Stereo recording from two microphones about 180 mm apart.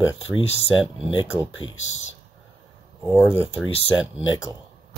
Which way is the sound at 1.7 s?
90° left.